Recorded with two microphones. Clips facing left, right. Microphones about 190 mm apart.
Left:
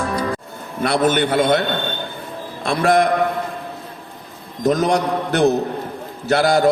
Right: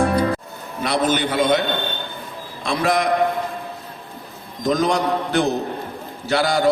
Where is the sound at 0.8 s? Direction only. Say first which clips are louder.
Left 3 dB; 50° left (ahead or behind).